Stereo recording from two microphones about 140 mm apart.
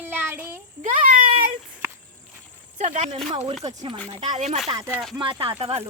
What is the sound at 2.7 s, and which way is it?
Speech, 55° right (ahead or behind).